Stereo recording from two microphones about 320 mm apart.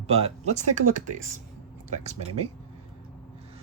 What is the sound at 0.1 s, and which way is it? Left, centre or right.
Speech, centre.